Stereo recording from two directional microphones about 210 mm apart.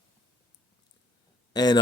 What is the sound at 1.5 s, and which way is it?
Speech, 20° left (ahead or behind).